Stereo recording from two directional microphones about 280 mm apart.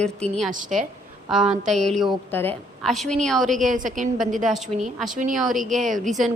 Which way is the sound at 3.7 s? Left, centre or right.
Right.